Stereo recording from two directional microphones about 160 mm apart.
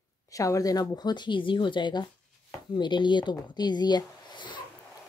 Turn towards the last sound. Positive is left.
turn(degrees=30)  # may be behind; listen again after turning